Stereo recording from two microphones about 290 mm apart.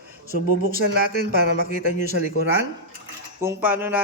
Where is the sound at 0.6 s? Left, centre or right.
Right.